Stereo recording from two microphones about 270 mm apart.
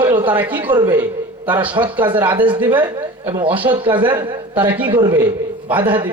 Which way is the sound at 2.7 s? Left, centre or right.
Centre.